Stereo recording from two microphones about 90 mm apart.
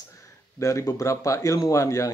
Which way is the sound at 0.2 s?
35° left (ahead or behind).